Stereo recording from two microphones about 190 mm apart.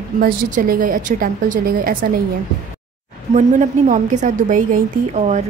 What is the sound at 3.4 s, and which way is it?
A woman's voice, 40° right (ahead or behind).